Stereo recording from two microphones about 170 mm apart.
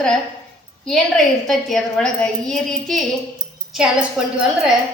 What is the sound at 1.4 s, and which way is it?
A woman's voice, centre (ahead or behind).